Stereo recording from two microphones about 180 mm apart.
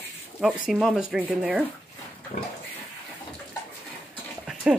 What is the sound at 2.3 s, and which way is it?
Pig, 40° left (ahead or behind).